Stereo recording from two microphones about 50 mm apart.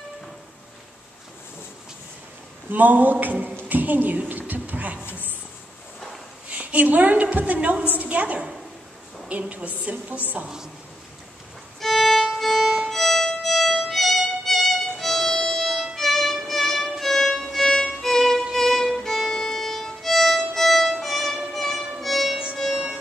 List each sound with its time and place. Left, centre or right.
2.7 s a woman's voice: right
6.5 s a woman's voice: right
11.8 s violin: centre
21.5 s music: centre